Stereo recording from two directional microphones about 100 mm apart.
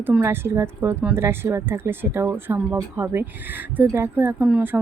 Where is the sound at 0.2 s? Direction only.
25° right (ahead or behind).